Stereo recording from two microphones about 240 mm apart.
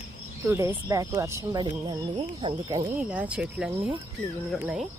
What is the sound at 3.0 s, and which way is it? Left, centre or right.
Speech, centre.